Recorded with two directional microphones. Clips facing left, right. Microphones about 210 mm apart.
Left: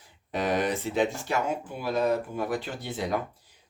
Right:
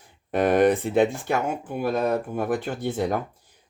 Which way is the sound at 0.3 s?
55° right (ahead or behind).